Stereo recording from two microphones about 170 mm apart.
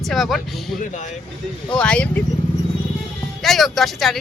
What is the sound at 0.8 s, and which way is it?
Speech, 45° left (ahead or behind).